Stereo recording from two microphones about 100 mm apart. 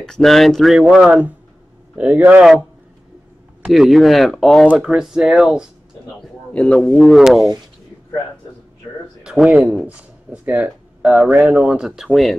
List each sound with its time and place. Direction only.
0.0 s speech: 5° left (ahead or behind); by 2.4 s 15° right (ahead or behind)
3.7 s speech: centre (ahead or behind)
6.5 s speech: 10° left (ahead or behind)
7.0 s speech: centre (ahead or behind)
9.2 s speech: 10° right (ahead or behind)
12.1 s speech: 5° left (ahead or behind)